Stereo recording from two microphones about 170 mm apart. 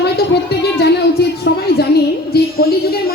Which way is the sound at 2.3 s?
65° left (ahead or behind).